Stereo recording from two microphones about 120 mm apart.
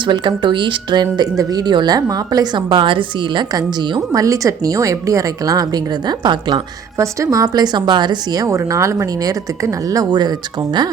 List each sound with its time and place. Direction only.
0.0 s a woman's voice: 40° right (ahead or behind)
7.0 s a woman's voice: 25° right (ahead or behind)